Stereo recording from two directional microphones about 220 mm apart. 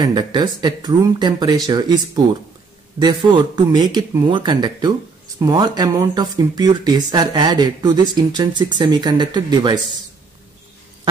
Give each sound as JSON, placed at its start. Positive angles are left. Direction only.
{"t": 0.0, "sound": "speech", "side_deg": -20}
{"t": 3.0, "sound": "speech", "side_deg": -20}